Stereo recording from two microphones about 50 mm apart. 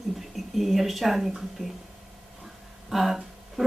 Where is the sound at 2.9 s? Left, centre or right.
Centre.